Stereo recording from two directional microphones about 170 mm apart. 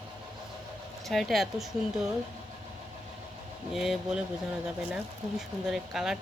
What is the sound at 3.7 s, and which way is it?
Speech, centre (ahead or behind).